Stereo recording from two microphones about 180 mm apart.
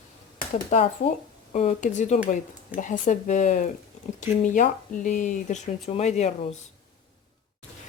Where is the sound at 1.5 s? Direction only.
40° left (ahead or behind).